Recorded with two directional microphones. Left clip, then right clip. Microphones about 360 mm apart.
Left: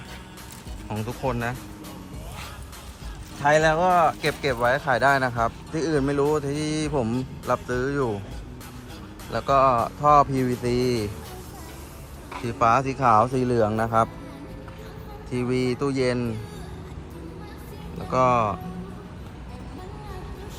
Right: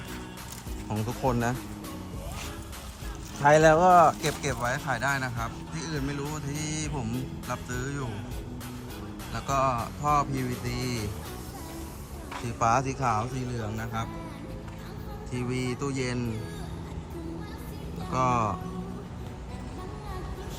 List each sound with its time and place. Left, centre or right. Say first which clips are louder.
0.9 s speech: left 1 dB; centre
3.4 s speech: even; right
4.4 s speech: left 10 dB; centre
9.3 s speech: left 8 dB; centre
12.3 s speech: left 5 dB; centre
15.3 s speech: left 8 dB; centre
18.1 s speech: left 6 dB; centre